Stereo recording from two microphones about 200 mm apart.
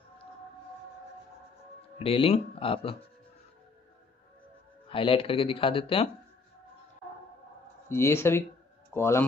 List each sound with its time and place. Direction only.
2.0 s speech: 30° left (ahead or behind)
4.8 s speech: 25° left (ahead or behind)
7.9 s speech: 10° left (ahead or behind)